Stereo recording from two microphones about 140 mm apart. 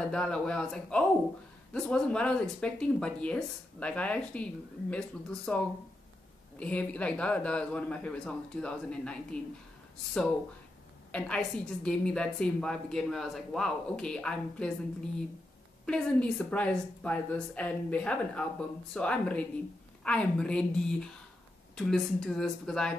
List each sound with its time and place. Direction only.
0.1 s a man's voice: 5° left (ahead or behind)
6.6 s a man's voice: 10° left (ahead or behind)
15.8 s a man's voice: 5° left (ahead or behind)